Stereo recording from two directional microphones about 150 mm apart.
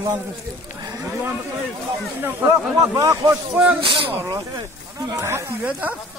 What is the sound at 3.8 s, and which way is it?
Speech, 35° right (ahead or behind).